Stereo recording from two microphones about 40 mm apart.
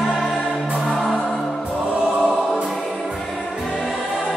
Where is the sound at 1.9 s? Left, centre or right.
Right.